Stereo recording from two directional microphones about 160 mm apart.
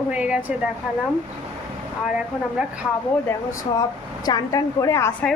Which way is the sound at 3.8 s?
25° left (ahead or behind).